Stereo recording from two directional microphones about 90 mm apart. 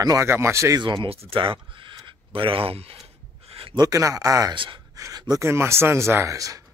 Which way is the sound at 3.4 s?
90° right.